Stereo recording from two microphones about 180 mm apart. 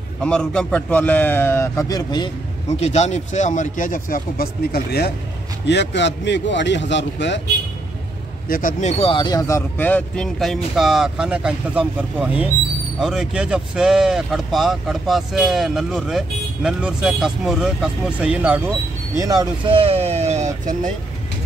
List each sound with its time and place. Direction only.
0.2 s a man's voice: 5° left (ahead or behind); by 2.3 s 25° left (ahead or behind)
2.8 s speech: 40° left (ahead or behind); by 5.1 s 60° left (ahead or behind)
5.7 s a man's voice: 75° left (ahead or behind)
8.5 s speech: 50° left (ahead or behind)
9.0 s speech: 25° left (ahead or behind); by 18.6 s 5° right (ahead or behind)
19.2 s speech: 25° right (ahead or behind)